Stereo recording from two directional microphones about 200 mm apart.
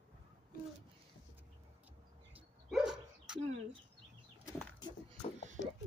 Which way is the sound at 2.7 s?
5° right (ahead or behind).